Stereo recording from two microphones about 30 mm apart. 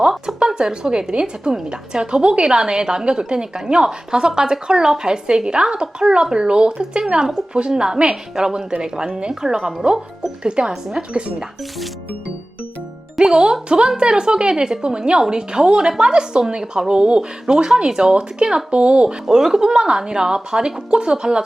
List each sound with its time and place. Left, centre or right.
0.3 s a woman's voice: right
7.7 s a woman's voice: right
10.4 s a woman's voice: right
13.1 s a woman's voice: right
17.4 s speech: right
18.7 s a woman's voice: right
19.3 s speech: centre